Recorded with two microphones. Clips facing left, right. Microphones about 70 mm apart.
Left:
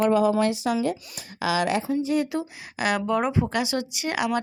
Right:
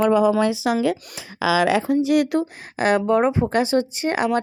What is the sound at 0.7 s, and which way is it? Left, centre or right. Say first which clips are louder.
Speech: right 4 dB; right.